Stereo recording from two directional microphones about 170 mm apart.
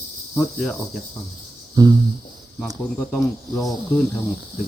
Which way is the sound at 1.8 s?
25° right (ahead or behind).